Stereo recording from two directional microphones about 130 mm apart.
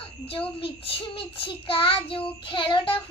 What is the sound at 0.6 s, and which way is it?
Child singing, 45° left (ahead or behind).